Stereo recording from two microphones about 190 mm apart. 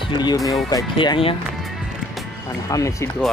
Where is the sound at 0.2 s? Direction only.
20° left (ahead or behind).